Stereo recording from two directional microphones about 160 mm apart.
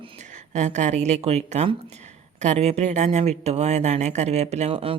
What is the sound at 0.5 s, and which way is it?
Speech, 45° right (ahead or behind).